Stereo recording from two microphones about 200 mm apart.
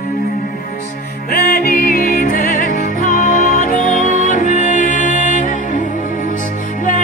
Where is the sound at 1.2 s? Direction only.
50° left (ahead or behind).